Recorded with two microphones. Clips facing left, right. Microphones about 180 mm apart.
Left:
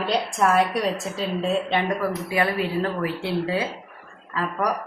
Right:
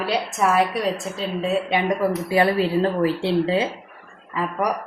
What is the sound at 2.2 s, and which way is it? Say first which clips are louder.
Speech: right 6 dB; 30° right (ahead or behind).